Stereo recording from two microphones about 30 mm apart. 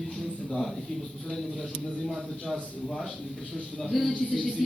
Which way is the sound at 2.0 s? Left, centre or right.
Centre.